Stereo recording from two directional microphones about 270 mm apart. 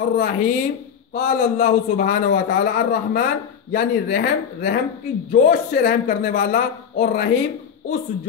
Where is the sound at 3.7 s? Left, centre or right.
Left.